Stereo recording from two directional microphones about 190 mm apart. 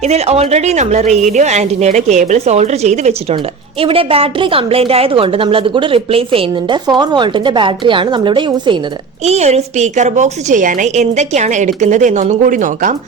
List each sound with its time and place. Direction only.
0.0 s a woman's voice: 35° right (ahead or behind)
9.2 s a woman's voice: 35° right (ahead or behind)